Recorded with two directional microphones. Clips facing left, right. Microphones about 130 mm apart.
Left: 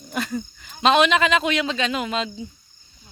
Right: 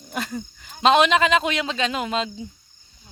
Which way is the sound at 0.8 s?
35° right (ahead or behind).